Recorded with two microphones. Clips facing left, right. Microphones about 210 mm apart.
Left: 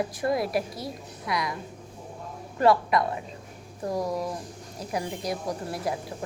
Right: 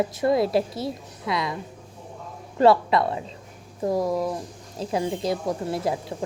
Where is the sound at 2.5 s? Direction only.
25° right (ahead or behind).